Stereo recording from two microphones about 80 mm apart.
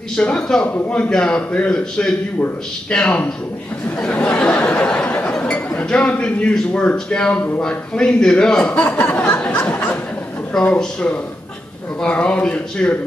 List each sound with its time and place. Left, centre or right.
0.1 s a man's voice: centre
4.0 s a sound: centre
5.8 s a man's voice: centre
8.7 s speech: centre
9.3 s a sound: centre
10.8 s a man's voice: centre